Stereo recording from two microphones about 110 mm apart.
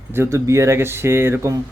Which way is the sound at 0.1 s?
25° right (ahead or behind).